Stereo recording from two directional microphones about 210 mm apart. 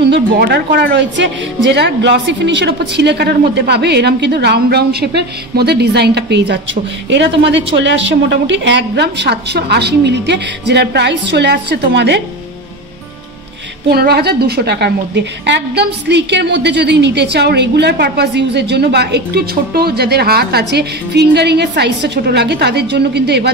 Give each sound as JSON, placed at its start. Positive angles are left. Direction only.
{"t": 0.0, "sound": "a woman's voice", "side_deg": -50}
{"t": 13.8, "sound": "a woman's voice", "side_deg": -50}